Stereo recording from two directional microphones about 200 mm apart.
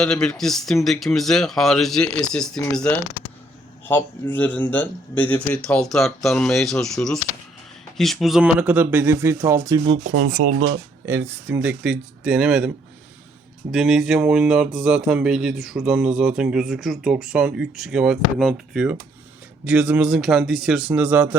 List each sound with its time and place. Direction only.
0.0 s speech: 5° left (ahead or behind); by 10.0 s 20° right (ahead or behind)
10.2 s speech: 45° right (ahead or behind)
11.0 s speech: 10° right (ahead or behind)